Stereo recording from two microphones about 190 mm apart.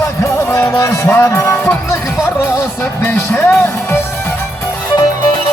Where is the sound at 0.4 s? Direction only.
15° left (ahead or behind).